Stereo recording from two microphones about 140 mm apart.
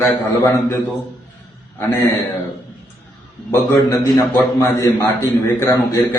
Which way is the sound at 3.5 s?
20° left (ahead or behind).